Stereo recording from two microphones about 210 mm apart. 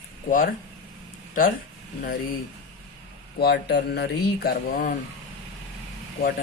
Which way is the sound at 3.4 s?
50° left (ahead or behind).